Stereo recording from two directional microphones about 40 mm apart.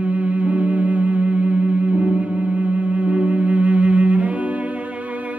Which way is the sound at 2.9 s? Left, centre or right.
Right.